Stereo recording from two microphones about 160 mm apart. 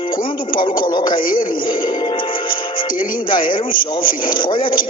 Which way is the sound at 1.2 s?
60° left (ahead or behind).